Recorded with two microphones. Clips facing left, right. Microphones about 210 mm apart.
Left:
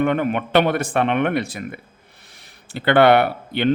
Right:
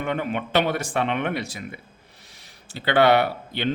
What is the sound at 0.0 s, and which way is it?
Speech, 55° left (ahead or behind).